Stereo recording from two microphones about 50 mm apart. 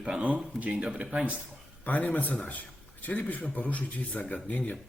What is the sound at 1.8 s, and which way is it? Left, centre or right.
A man's voice, left.